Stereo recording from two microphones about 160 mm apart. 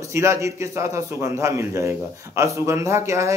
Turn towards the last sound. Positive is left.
turn(degrees=-20)  # may be behind; listen again after turning